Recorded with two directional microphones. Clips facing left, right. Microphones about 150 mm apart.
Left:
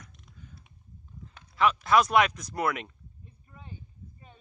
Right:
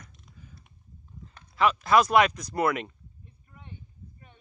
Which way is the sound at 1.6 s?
Centre (ahead or behind).